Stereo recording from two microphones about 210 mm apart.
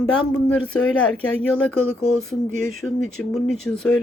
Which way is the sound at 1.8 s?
85° left.